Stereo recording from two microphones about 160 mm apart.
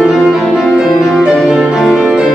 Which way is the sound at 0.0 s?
Centre (ahead or behind).